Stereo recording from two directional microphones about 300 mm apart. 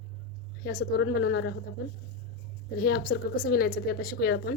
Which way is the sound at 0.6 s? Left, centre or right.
Left.